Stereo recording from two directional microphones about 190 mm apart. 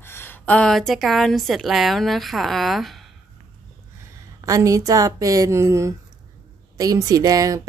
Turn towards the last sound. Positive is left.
turn(degrees=-20)  # may be behind; listen again after turning